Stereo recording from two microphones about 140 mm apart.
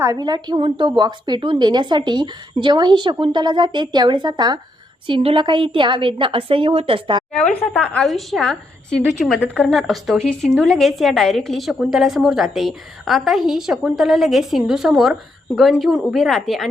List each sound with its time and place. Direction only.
0.0 s a woman's voice: 25° right (ahead or behind)
7.3 s a woman's voice: 5° left (ahead or behind)